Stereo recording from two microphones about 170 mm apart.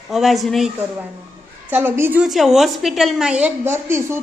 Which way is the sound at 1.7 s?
10° right (ahead or behind).